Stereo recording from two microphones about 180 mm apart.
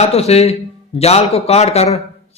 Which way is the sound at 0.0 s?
35° left (ahead or behind).